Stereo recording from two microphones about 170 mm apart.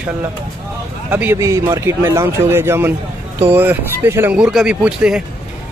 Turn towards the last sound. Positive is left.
turn(degrees=-5)  # may be behind; listen again after turning